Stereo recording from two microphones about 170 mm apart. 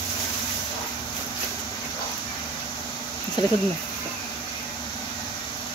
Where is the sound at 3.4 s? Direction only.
25° left (ahead or behind).